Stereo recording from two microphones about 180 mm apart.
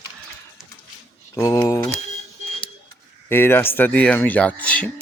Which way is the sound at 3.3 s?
15° left (ahead or behind).